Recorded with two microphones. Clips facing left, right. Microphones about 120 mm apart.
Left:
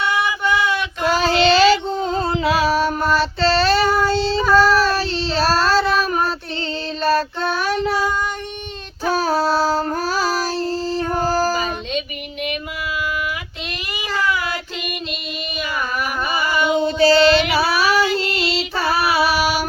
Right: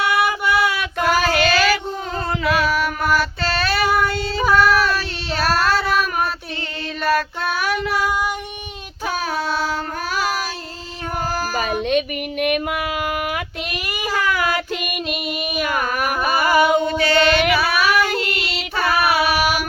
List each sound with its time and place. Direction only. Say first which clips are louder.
1.0 s child singing: left 2 dB; 30° left (ahead or behind)
3.9 s female singing: left 3 dB; 30° left (ahead or behind)
4.5 s child singing: left 2 dB; 30° left (ahead or behind)
7.0 s child singing: left 1 dB; 30° left (ahead or behind)
9.1 s child singing: left 5 dB; 35° left (ahead or behind)
11.3 s a sound: left 7 dB; 35° left (ahead or behind)
11.5 s child singing: right 3 dB; 55° right (ahead or behind)
16.3 s a sound: right 3 dB; 55° right (ahead or behind)
16.8 s child singing: left 4 dB; 30° left (ahead or behind)